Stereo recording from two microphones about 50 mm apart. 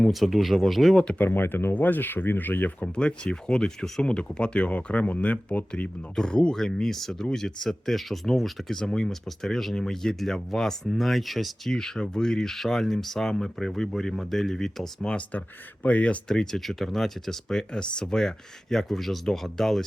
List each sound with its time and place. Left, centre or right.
0.1 s speech: centre
1.2 s speech: left
2.8 s speech: left
6.1 s speech: centre
15.1 s speech: left
16.3 s speech: centre